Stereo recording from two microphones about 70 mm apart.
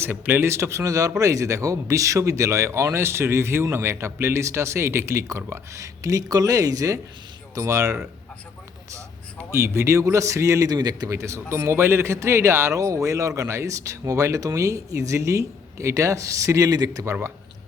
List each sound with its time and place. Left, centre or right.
0.0 s a man's voice: right
9.5 s speech: right
11.1 s speech: right